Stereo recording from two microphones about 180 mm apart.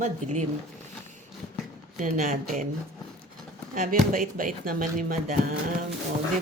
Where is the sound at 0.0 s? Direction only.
40° right (ahead or behind).